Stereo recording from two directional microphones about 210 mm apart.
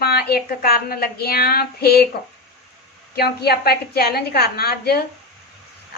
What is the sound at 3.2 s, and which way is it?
A woman's voice, 50° left (ahead or behind).